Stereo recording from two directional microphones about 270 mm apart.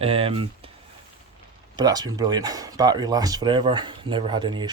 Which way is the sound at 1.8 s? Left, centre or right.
Centre.